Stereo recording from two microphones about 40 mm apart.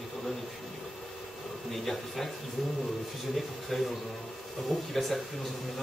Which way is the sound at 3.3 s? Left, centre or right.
Centre.